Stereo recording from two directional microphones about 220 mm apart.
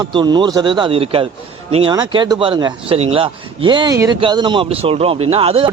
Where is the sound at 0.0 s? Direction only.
20° right (ahead or behind).